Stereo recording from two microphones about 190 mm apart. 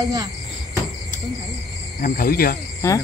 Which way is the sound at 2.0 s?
45° left (ahead or behind).